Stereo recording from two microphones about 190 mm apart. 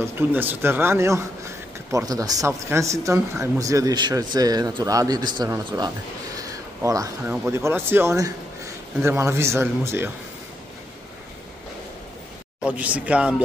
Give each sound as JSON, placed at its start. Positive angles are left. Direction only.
{"t": 0.0, "sound": "speech", "side_deg": -10}
{"t": 6.3, "sound": "a sound", "side_deg": -20}
{"t": 7.4, "sound": "speech", "side_deg": -15}
{"t": 12.6, "sound": "speech", "side_deg": -5}